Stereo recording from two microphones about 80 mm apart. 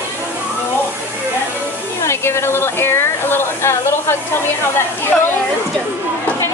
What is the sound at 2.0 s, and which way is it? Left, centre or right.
Speech, left.